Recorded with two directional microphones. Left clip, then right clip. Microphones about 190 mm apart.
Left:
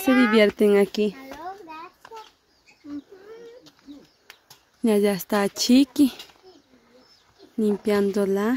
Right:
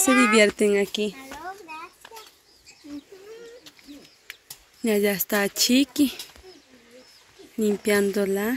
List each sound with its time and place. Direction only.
0.2 s speech: 15° left (ahead or behind)
0.6 s a sound: 25° left (ahead or behind)
4.8 s a woman's voice: 25° left (ahead or behind)
7.5 s speech: 15° left (ahead or behind)